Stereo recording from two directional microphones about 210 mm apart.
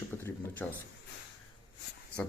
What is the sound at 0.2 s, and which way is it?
Speech, 10° left (ahead or behind).